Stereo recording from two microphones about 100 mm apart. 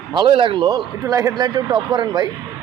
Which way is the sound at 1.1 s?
35° right (ahead or behind).